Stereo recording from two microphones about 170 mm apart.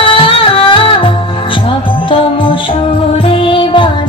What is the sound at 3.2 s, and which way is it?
Music, 30° left (ahead or behind).